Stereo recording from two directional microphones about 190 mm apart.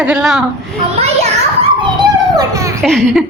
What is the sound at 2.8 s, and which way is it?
Speech, centre (ahead or behind).